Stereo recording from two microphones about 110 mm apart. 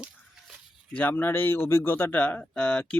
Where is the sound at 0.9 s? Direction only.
20° left (ahead or behind).